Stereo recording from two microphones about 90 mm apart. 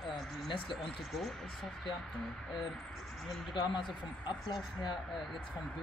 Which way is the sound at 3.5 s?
60° left (ahead or behind).